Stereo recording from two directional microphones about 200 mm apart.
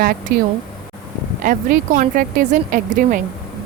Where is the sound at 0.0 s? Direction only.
50° right (ahead or behind).